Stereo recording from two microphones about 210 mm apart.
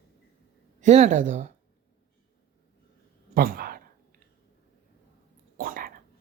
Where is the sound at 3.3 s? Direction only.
45° right (ahead or behind).